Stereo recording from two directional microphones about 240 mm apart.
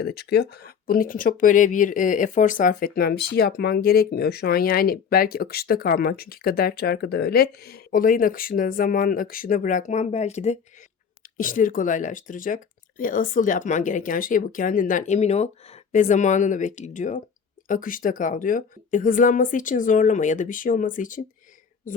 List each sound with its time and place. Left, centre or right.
0.0 s speech: left